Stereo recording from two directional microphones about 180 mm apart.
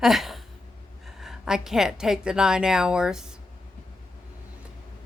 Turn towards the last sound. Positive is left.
turn(degrees=-5)  # may be behind; listen again after turning